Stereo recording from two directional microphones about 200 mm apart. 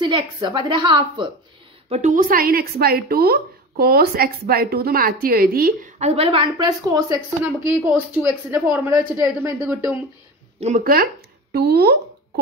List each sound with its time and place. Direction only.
0.0 s speech: 20° right (ahead or behind)
1.9 s a woman's voice: 40° right (ahead or behind)
6.0 s a man's voice: 30° right (ahead or behind); by 9.8 s 10° right (ahead or behind)
10.8 s a woman's voice: 45° right (ahead or behind)